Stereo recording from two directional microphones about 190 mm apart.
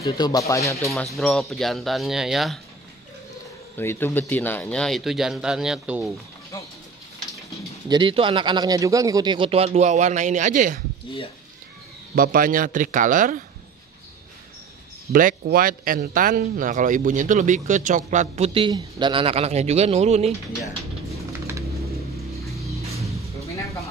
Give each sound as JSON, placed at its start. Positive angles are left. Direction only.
{"t": 0.0, "sound": "speech", "side_deg": 20}
{"t": 0.9, "sound": "speech", "side_deg": 0}
{"t": 3.7, "sound": "speech", "side_deg": 10}
{"t": 7.9, "sound": "speech", "side_deg": -25}
{"t": 12.2, "sound": "speech", "side_deg": -50}
{"t": 15.1, "sound": "speech", "side_deg": -50}
{"t": 22.8, "sound": "music", "side_deg": -15}